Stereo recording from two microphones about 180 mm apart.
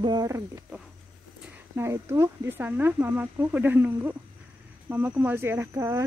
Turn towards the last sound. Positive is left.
turn(degrees=-15)  # may be behind; listen again after turning